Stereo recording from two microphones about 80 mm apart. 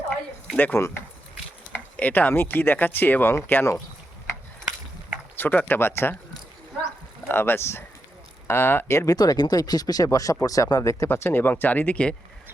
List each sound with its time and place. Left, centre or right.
0.5 s speech: left
0.8 s speech: left
1.7 s speech: left
5.4 s speech: left
7.3 s speech: left
9.0 s speech: left
11.1 s speech: left